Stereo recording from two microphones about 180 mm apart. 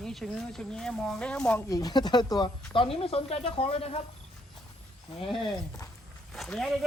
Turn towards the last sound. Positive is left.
turn(degrees=0)  # may be behind; listen again after turning